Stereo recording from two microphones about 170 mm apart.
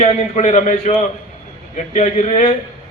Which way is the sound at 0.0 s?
40° left (ahead or behind).